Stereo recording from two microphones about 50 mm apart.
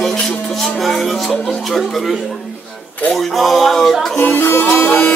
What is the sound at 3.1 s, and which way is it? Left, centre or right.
Speech, centre.